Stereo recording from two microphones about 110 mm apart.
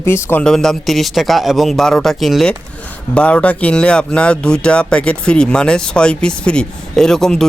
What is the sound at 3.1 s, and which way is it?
Speech, 10° left (ahead or behind).